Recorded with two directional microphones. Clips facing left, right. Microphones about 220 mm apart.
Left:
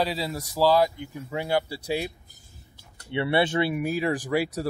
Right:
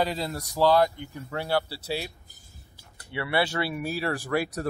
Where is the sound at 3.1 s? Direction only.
25° left (ahead or behind).